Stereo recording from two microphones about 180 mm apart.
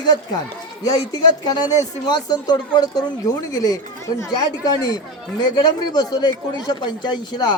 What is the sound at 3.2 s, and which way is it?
Speech, 20° left (ahead or behind).